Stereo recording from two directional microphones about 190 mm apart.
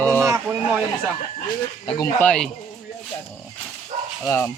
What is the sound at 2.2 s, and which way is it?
Speech, 5° left (ahead or behind).